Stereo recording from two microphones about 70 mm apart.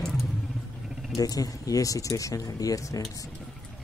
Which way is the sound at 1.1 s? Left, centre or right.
Left.